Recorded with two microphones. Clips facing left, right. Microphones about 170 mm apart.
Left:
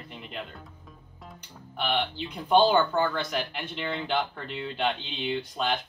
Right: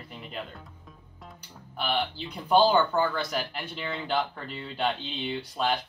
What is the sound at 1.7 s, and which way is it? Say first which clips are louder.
Speech: left 1 dB; 5° right (ahead or behind).